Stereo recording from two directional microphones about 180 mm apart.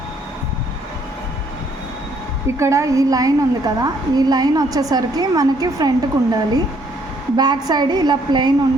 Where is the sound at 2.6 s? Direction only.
15° right (ahead or behind).